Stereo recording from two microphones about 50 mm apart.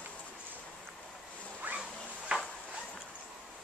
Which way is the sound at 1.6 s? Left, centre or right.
Right.